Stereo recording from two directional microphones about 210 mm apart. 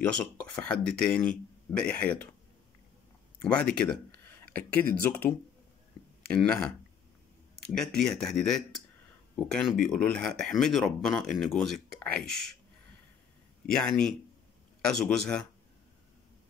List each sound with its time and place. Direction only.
0.0 s speech: 5° left (ahead or behind)
3.3 s speech: 5° left (ahead or behind)
6.3 s speech: 5° left (ahead or behind)
7.7 s speech: 5° left (ahead or behind)
13.7 s speech: 5° left (ahead or behind)